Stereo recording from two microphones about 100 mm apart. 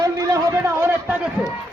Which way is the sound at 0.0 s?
35° right (ahead or behind).